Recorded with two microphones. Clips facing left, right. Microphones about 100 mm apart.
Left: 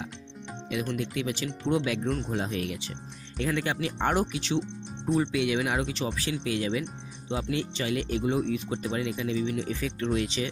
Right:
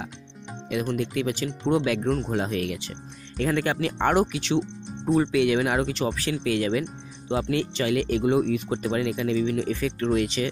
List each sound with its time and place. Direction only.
0.7 s speech: 50° right (ahead or behind)
2.3 s speech: 70° right (ahead or behind)
3.3 s speech: 55° right (ahead or behind); by 4.6 s 75° right (ahead or behind)
5.1 s speech: 55° right (ahead or behind)